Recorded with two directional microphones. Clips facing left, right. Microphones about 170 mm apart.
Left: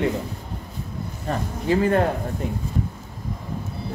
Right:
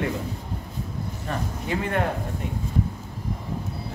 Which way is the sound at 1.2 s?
35° left (ahead or behind).